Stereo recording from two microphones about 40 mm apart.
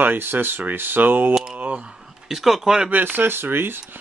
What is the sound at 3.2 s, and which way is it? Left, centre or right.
Speech, right.